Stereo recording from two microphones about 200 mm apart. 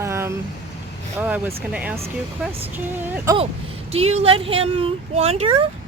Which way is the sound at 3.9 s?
30° right (ahead or behind).